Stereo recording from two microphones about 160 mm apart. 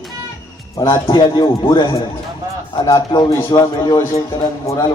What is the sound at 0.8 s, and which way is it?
A man's voice, 30° left (ahead or behind).